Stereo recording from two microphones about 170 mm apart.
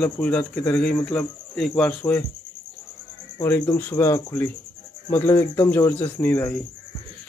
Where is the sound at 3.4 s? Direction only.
15° left (ahead or behind).